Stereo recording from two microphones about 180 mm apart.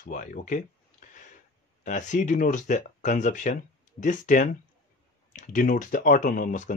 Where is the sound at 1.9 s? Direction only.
40° left (ahead or behind).